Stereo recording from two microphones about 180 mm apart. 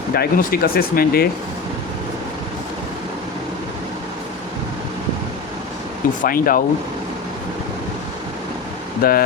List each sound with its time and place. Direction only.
0.1 s speech: 60° left (ahead or behind)
6.2 s speech: 55° left (ahead or behind)
9.0 s speech: 55° left (ahead or behind)